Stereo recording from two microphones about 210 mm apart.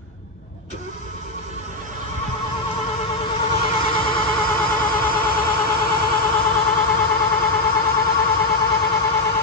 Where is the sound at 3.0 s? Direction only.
30° left (ahead or behind).